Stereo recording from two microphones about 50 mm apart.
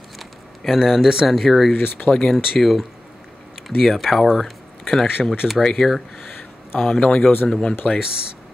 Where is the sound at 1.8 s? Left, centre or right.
Left.